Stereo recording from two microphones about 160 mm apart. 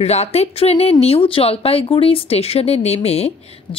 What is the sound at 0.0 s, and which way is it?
Speech, 40° left (ahead or behind).